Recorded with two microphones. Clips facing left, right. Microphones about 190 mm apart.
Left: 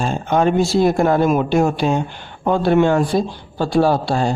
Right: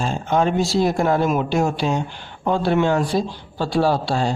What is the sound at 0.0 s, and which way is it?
Speech, 55° left (ahead or behind).